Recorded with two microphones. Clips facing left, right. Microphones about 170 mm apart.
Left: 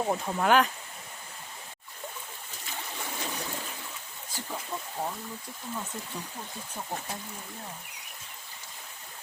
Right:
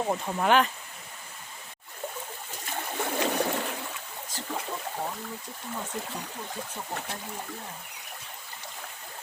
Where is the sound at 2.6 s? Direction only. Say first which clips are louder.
Right 7 dB; 65° right (ahead or behind).